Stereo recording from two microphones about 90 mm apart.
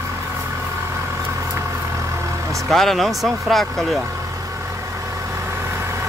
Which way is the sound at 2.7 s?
Centre (ahead or behind).